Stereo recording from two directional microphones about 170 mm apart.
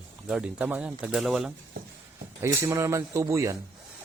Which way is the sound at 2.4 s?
15° right (ahead or behind).